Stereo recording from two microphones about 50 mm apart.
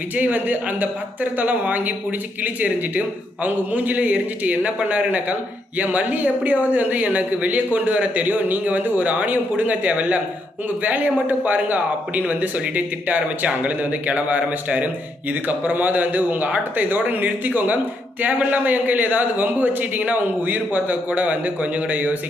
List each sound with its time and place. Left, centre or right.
0.2 s speech: right